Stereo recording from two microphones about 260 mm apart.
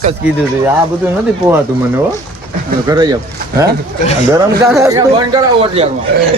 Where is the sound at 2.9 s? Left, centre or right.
Centre.